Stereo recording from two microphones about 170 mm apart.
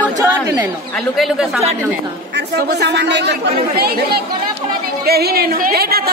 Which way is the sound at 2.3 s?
80° right.